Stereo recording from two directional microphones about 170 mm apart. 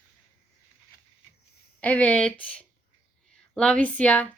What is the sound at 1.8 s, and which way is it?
Speech, 10° left (ahead or behind).